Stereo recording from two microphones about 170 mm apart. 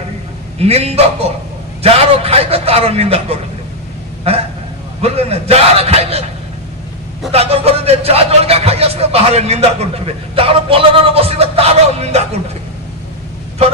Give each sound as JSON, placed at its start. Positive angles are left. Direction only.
{"t": 0.6, "sound": "speech", "side_deg": -35}
{"t": 7.3, "sound": "speech", "side_deg": -35}